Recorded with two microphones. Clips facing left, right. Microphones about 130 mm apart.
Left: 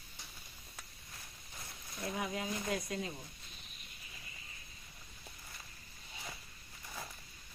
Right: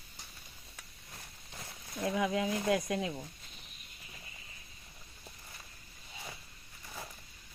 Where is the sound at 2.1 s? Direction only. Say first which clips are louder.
Right 7 dB; 90° right.